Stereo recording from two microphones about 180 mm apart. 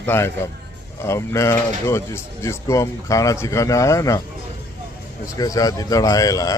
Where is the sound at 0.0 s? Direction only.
15° left (ahead or behind).